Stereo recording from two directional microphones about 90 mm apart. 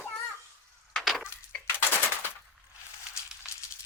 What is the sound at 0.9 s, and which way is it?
Wood, centre (ahead or behind).